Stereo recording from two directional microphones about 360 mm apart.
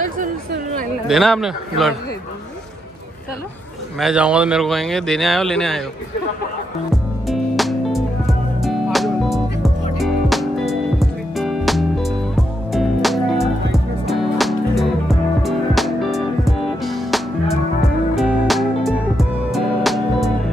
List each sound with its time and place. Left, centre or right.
0.2 s chatter: right
1.0 s speech: centre
4.0 s speech: centre
7.2 s music: centre